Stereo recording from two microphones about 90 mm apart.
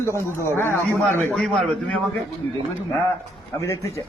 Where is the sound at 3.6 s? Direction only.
35° left (ahead or behind).